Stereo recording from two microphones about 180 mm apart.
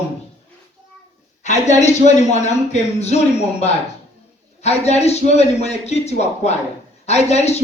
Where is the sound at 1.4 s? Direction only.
40° left (ahead or behind).